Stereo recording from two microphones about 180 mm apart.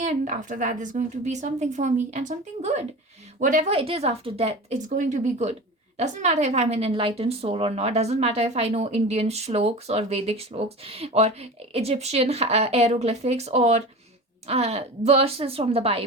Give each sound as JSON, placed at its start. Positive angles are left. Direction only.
{"t": 0.0, "sound": "a woman's voice", "side_deg": -45}
{"t": 3.7, "sound": "a woman's voice", "side_deg": -30}